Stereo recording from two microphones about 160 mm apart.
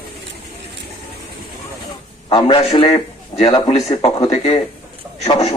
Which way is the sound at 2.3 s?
30° left (ahead or behind).